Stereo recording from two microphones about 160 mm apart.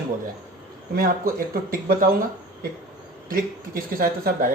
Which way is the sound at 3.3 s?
65° right (ahead or behind).